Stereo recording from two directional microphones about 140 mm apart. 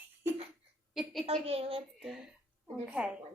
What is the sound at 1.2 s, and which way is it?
Speech, 45° right (ahead or behind).